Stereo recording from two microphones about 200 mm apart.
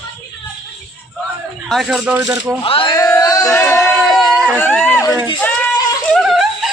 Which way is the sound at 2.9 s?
15° left (ahead or behind).